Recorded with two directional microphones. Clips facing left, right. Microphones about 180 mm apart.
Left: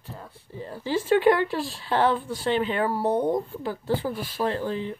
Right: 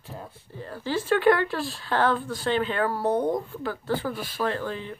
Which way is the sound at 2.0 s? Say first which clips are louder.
Left 1 dB; 25° left (ahead or behind).